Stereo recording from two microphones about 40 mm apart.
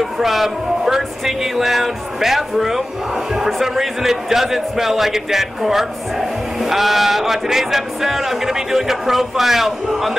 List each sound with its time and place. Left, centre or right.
0.0 s speech: centre